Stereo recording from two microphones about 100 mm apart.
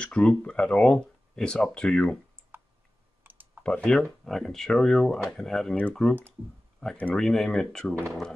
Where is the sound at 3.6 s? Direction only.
10° left (ahead or behind).